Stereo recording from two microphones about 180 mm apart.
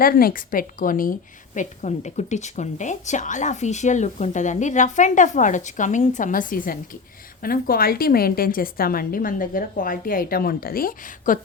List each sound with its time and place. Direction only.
0.0 s a woman's voice: 55° left (ahead or behind)